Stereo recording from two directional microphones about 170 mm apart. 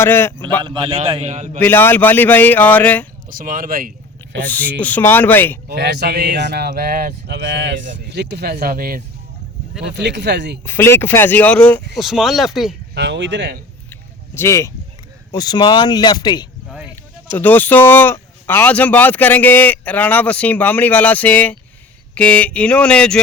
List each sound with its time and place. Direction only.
0.0 s speech: 15° left (ahead or behind)
0.6 s a man's voice: 30° right (ahead or behind)
1.5 s speech: 10° left (ahead or behind)
3.2 s speech: 55° right (ahead or behind); by 4.4 s 75° right (ahead or behind)
4.4 s speech: 10° left (ahead or behind)
5.6 s speech: 75° right (ahead or behind)
8.6 s speech: 60° right (ahead or behind)
9.8 s speech: 90° right
10.7 s speech: 15° left (ahead or behind); by 12.7 s centre (ahead or behind)
12.9 s speech: 90° right
13.9 s a sound: 15° left (ahead or behind)
15.3 s speech: 25° left (ahead or behind)
17.3 s speech: 10° left (ahead or behind)